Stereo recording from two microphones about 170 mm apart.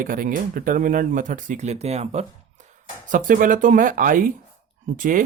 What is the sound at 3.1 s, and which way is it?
Speech, 50° right (ahead or behind).